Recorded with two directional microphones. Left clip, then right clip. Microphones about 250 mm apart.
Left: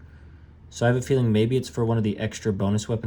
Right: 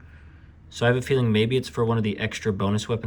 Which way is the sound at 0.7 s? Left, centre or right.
Centre.